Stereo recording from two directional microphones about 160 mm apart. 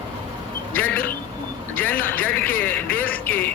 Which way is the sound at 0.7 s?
10° left (ahead or behind).